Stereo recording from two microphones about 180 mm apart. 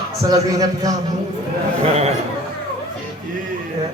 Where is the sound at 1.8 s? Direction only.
35° right (ahead or behind).